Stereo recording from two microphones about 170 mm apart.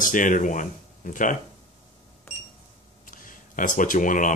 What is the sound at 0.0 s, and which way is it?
Speech, 50° left (ahead or behind).